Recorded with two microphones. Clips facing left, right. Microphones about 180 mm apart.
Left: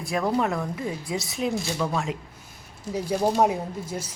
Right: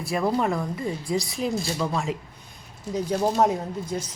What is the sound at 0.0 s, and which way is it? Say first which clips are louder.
Speech: right 1 dB; centre (ahead or behind).